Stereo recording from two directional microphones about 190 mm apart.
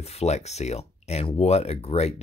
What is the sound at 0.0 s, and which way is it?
Speech, 35° left (ahead or behind).